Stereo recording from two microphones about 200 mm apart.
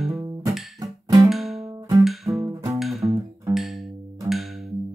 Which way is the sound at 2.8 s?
Centre (ahead or behind).